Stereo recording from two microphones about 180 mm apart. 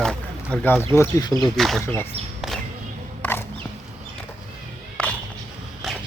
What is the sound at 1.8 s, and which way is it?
Speech, 15° left (ahead or behind).